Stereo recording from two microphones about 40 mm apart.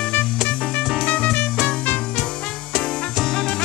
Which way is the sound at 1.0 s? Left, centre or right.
Left.